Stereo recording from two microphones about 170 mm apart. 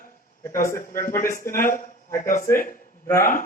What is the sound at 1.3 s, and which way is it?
Speech, 55° left (ahead or behind).